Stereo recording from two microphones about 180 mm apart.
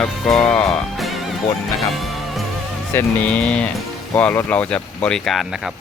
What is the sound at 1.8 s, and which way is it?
Music, centre (ahead or behind).